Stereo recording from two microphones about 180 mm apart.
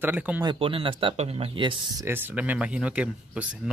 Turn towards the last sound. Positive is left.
turn(degrees=-5)  # may be behind; listen again after turning